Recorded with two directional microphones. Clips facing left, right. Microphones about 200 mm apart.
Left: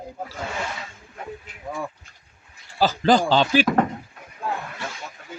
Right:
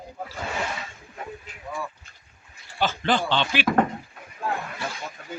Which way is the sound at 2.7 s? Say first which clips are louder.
Left 6 dB; 35° left (ahead or behind).